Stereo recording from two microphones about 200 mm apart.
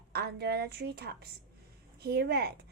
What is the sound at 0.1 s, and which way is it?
A woman's voice, 55° right (ahead or behind).